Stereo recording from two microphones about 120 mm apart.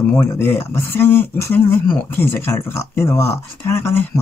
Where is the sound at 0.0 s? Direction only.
15° left (ahead or behind).